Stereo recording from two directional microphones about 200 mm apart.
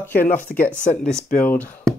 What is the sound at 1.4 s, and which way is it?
Speech, 10° left (ahead or behind).